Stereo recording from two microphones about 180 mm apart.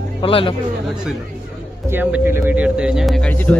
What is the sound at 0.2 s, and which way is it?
Speech, 30° left (ahead or behind).